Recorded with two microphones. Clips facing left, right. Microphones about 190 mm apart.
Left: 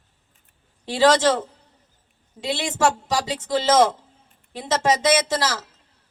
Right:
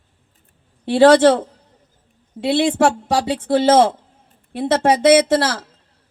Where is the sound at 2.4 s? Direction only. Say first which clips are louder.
Right 7 dB; 60° right (ahead or behind).